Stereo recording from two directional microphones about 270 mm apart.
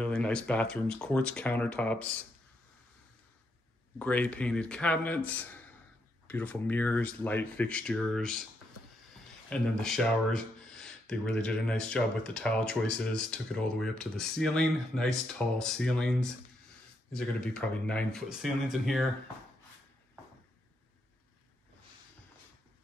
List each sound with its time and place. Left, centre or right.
0.0 s speech: centre
4.0 s speech: centre